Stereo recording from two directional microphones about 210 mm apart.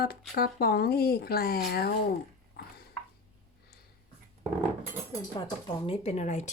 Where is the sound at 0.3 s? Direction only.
45° left (ahead or behind).